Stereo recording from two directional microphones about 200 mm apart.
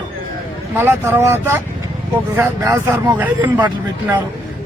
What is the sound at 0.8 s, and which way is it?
A man's voice, 10° right (ahead or behind).